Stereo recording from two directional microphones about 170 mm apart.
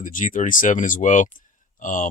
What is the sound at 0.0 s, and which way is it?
Speech, 50° left (ahead or behind).